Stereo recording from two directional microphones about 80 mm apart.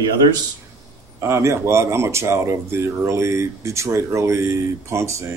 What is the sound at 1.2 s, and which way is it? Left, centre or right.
Speech, right.